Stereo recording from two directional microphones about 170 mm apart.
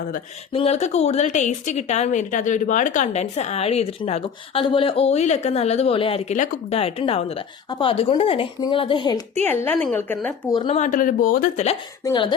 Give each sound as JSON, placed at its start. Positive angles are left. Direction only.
{"t": 0.5, "sound": "a woman's voice", "side_deg": 35}
{"t": 9.4, "sound": "a woman's voice", "side_deg": 10}
{"t": 10.5, "sound": "speech", "side_deg": 30}
{"t": 10.8, "sound": "speech", "side_deg": 50}
{"t": 12.0, "sound": "speech", "side_deg": 25}